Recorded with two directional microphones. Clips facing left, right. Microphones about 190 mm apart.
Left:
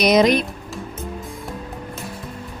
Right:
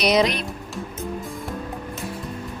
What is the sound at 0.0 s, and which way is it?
Speech, 45° left (ahead or behind).